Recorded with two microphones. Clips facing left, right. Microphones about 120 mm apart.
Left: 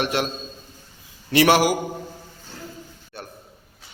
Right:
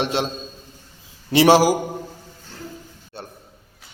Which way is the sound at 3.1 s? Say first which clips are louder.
Right 1 dB; 30° right (ahead or behind).